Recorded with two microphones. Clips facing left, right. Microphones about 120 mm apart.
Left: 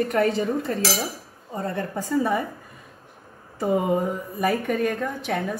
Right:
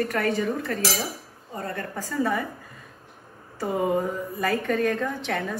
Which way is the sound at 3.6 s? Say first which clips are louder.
Left 2 dB; 25° left (ahead or behind).